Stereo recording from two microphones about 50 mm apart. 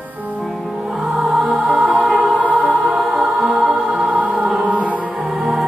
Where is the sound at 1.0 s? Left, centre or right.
Centre.